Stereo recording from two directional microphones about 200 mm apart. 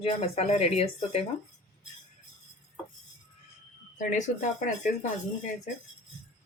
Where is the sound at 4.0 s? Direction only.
40° left (ahead or behind).